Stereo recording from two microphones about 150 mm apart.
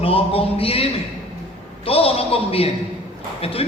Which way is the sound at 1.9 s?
40° left (ahead or behind).